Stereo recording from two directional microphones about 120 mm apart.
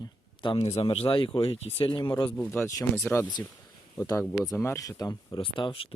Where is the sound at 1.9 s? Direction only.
40° left (ahead or behind).